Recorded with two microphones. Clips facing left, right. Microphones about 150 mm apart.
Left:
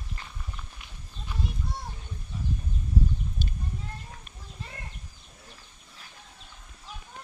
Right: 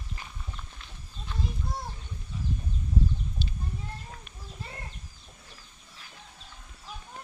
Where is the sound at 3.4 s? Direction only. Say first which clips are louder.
Even; 50° left (ahead or behind).